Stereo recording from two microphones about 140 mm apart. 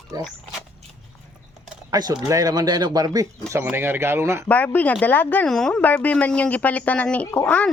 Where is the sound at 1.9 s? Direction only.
30° right (ahead or behind).